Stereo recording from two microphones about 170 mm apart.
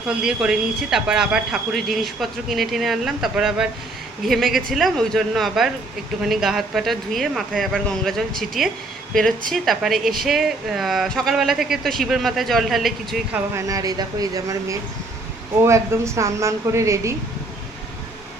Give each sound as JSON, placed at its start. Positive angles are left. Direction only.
{"t": 0.1, "sound": "speech", "side_deg": -5}
{"t": 13.5, "sound": "a woman's voice", "side_deg": -20}